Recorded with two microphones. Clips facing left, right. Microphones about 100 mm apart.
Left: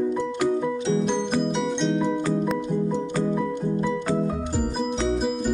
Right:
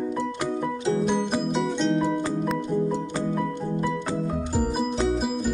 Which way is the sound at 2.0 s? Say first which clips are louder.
Left 1 dB; 10° right (ahead or behind).